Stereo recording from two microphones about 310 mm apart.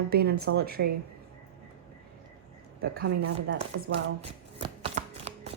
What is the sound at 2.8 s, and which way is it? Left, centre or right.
Speech, right.